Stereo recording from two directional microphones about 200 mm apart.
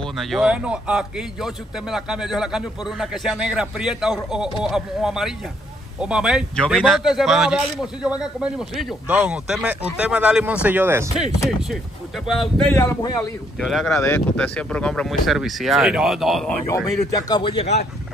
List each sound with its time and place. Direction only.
0.0 s a man's voice: centre (ahead or behind)
12.3 s speech: centre (ahead or behind)
13.6 s a man's voice: centre (ahead or behind)
16.6 s speech: 20° left (ahead or behind)